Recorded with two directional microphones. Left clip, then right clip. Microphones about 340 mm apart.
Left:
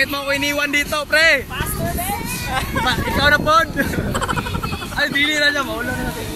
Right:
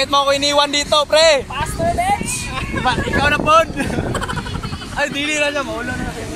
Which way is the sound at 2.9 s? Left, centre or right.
Centre.